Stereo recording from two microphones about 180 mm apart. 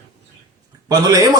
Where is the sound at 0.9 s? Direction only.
20° right (ahead or behind).